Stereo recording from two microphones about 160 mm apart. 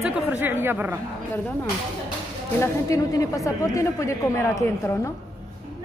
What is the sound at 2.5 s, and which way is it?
Speech, 20° left (ahead or behind).